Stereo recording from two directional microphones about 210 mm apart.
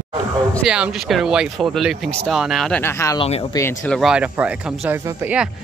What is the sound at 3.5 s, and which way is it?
Speech, 10° left (ahead or behind).